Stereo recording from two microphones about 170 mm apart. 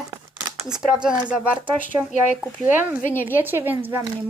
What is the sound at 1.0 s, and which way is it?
Speech, 5° right (ahead or behind).